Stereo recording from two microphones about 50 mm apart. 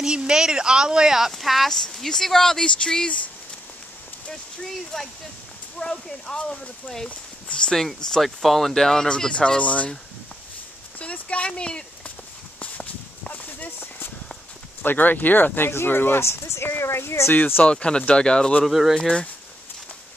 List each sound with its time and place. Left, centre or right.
0.0 s speech: centre
1.7 s speech: centre
4.3 s speech: centre; by 7.7 s left
7.7 s speech: centre; by 9.8 s left
11.0 s speech: left
13.3 s clip-clop: left
14.8 s speech: left
16.2 s speech: left
17.3 s speech: left
17.6 s speech: centre
18.7 s speech: centre
18.9 s speech: centre